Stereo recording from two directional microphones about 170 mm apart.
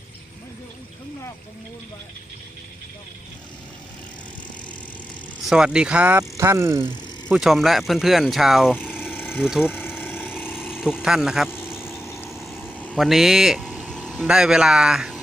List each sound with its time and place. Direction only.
5.5 s speech: 5° right (ahead or behind)
7.3 s speech: 5° right (ahead or behind)
9.0 s vehicle: 15° left (ahead or behind)
9.4 s speech: 5° right (ahead or behind)
9.6 s vehicle: 15° left (ahead or behind)
10.5 s a sound: 5° right (ahead or behind)
11.0 s speech: 5° right (ahead or behind)
11.4 s vehicle: 15° left (ahead or behind)
12.3 s vehicle: centre (ahead or behind)
12.6 s vehicle: 10° left (ahead or behind)
13.0 s speech: centre (ahead or behind)